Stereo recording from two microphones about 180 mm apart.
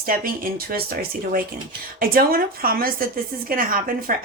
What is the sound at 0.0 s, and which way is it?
A woman's voice, 50° right (ahead or behind).